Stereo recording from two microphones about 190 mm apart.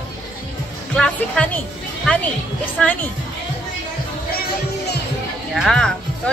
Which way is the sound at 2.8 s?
5° left (ahead or behind).